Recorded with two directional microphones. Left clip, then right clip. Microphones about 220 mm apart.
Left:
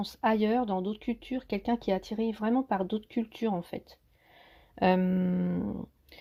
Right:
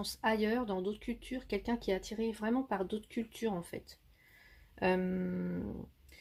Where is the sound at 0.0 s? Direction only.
25° left (ahead or behind).